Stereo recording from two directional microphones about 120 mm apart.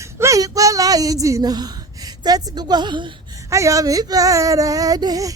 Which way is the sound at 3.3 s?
25° right (ahead or behind).